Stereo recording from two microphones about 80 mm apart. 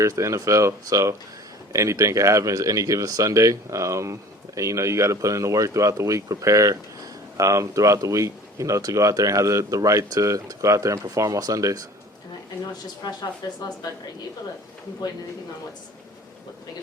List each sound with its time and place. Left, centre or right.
0.0 s speech: right
13.4 s speech: left